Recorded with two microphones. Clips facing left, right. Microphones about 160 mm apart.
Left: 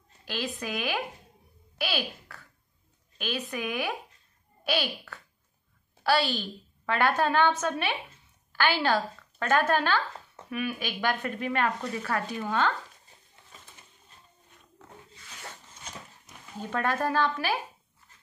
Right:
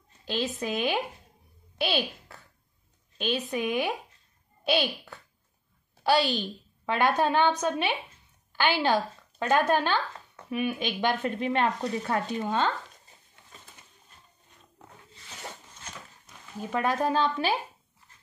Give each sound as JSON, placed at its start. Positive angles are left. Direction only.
{"t": 0.2, "sound": "a sound", "side_deg": -20}
{"t": 0.6, "sound": "a woman's voice", "side_deg": -20}
{"t": 14.8, "sound": "rub", "side_deg": -20}
{"t": 16.7, "sound": "speech", "side_deg": -15}